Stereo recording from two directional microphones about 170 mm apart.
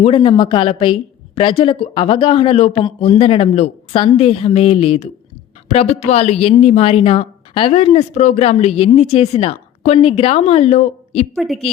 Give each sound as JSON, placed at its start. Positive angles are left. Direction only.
{"t": 0.0, "sound": "a woman's voice", "side_deg": 30}
{"t": 11.3, "sound": "a woman's voice", "side_deg": 0}